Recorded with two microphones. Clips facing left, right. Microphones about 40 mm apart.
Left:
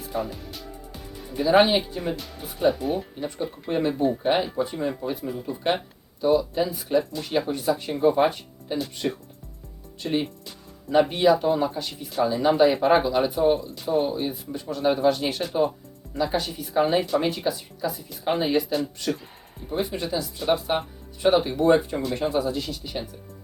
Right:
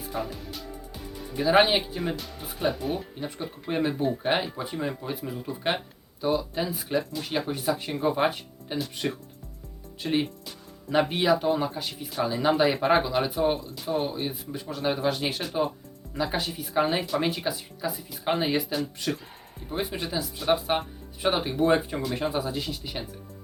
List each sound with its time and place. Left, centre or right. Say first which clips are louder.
0.1 s speech: left 3 dB; centre
13.1 s speech: left 4 dB; centre